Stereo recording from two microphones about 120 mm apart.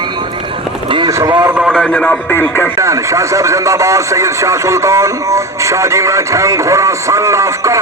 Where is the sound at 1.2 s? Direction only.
35° right (ahead or behind).